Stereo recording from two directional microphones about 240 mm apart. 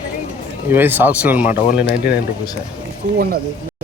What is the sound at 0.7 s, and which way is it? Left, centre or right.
Speech, centre.